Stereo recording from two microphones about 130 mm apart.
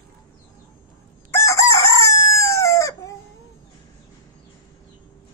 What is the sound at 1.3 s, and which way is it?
Chicken, 20° left (ahead or behind).